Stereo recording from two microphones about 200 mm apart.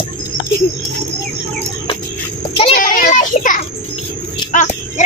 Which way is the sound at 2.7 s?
45° left (ahead or behind).